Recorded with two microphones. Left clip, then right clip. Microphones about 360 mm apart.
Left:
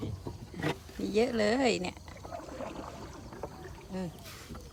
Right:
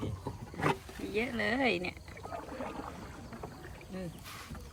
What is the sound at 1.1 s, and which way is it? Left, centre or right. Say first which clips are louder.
Speech: left 5 dB; centre.